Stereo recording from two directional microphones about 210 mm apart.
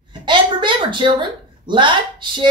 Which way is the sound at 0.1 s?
20° right (ahead or behind).